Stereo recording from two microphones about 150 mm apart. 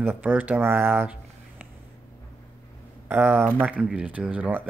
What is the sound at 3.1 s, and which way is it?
Speech, 10° right (ahead or behind).